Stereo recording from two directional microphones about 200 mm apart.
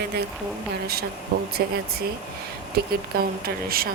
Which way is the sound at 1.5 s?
50° right (ahead or behind).